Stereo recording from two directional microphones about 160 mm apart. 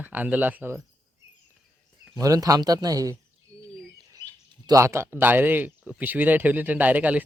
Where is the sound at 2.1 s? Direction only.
20° right (ahead or behind).